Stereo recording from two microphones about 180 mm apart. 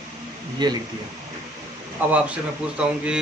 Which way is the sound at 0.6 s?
25° right (ahead or behind).